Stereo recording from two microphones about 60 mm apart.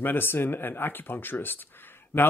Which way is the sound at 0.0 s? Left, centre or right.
Left.